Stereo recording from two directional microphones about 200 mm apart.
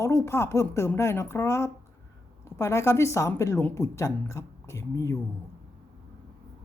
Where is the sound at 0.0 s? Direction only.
10° left (ahead or behind).